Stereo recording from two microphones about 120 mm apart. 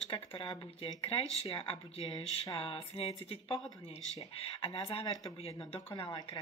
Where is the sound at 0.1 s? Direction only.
45° left (ahead or behind).